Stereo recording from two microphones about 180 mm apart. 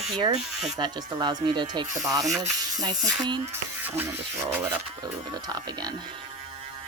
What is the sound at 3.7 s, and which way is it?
Speech, 10° right (ahead or behind).